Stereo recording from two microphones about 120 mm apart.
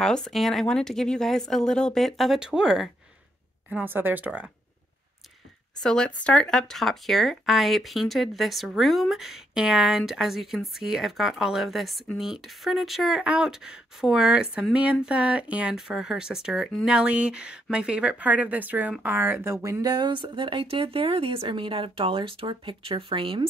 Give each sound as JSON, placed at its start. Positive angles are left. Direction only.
{"t": 0.0, "sound": "speech", "side_deg": 5}
{"t": 3.7, "sound": "speech", "side_deg": -15}
{"t": 5.8, "sound": "speech", "side_deg": 5}